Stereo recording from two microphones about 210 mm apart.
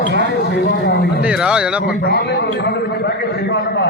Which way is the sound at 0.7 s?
50° left (ahead or behind).